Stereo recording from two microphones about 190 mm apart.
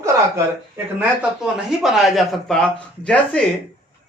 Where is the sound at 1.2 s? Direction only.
5° right (ahead or behind).